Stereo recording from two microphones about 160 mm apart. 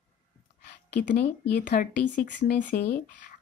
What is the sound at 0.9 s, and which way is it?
Speech, 90° left.